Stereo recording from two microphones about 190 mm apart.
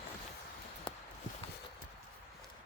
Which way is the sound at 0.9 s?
25° left (ahead or behind).